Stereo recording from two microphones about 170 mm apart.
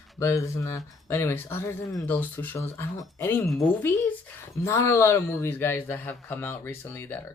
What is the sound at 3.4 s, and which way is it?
Speech, centre (ahead or behind).